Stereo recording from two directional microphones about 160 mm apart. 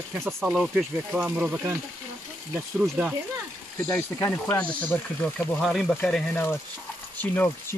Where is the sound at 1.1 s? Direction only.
10° right (ahead or behind).